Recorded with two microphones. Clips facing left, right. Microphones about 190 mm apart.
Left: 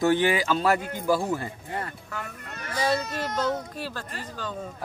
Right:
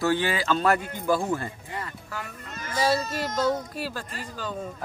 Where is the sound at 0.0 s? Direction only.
20° left (ahead or behind).